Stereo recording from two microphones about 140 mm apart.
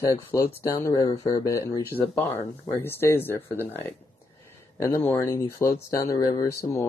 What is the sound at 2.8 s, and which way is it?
A man's voice, 15° left (ahead or behind).